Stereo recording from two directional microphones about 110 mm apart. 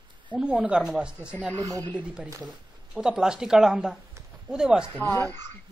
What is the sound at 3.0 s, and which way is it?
Speech, 5° right (ahead or behind).